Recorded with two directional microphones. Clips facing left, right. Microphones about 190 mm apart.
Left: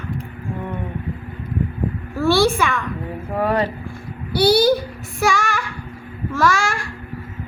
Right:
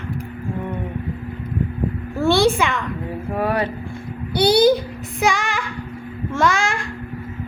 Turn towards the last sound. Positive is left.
turn(degrees=-20)  # may be behind; listen again after turning